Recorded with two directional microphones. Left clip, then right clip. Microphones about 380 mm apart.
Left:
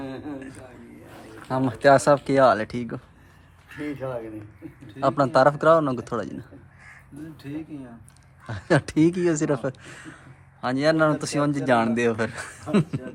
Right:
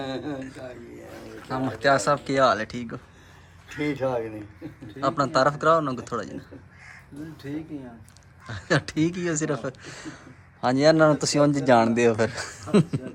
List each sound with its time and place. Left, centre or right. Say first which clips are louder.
0.0 s a man's voice: right 3 dB; right
1.5 s speech: left 4 dB; centre
3.8 s speech: right 5 dB; right
4.9 s speech: left 3 dB; centre
8.4 s speech: left 2 dB; centre